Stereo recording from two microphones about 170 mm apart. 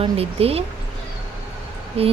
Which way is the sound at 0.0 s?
35° right (ahead or behind).